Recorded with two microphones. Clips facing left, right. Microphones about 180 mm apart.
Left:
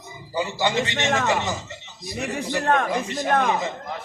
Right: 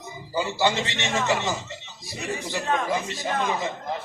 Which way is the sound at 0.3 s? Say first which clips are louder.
Even; 20° left (ahead or behind).